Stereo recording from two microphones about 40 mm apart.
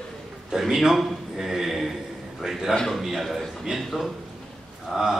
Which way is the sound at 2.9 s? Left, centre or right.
Centre.